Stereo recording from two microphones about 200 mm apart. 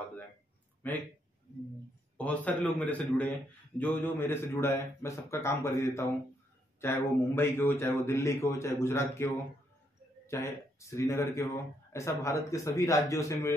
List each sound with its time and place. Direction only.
0.8 s a man's voice: 10° left (ahead or behind)
2.1 s a man's voice: 5° left (ahead or behind)